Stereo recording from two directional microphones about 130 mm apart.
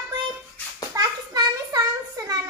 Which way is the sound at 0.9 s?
30° right (ahead or behind).